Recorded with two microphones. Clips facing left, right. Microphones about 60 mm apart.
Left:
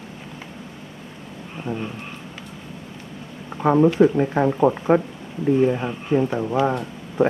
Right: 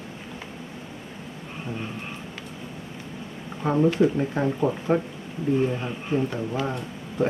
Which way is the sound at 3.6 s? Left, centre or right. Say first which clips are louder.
Left 5 dB; left.